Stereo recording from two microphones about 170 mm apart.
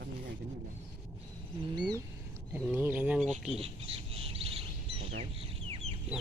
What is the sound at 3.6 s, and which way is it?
Bird, 35° right (ahead or behind).